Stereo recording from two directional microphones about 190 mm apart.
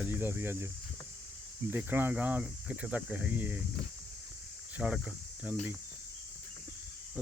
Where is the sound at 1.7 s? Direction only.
10° right (ahead or behind).